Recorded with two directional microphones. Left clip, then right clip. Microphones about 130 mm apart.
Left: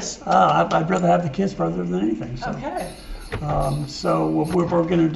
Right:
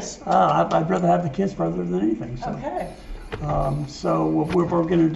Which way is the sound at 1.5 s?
25° left (ahead or behind).